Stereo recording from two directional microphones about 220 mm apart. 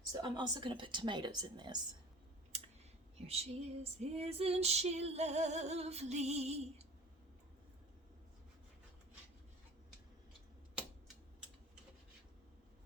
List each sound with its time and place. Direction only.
0.1 s female singing: 20° right (ahead or behind)
2.5 s clicking: 30° right (ahead or behind)
3.2 s female singing: 30° right (ahead or behind)